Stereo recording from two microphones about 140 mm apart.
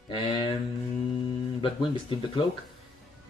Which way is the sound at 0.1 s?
30° left (ahead or behind).